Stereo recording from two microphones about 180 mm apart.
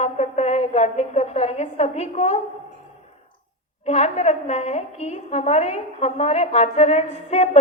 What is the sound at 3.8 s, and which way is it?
A woman's voice, 35° left (ahead or behind).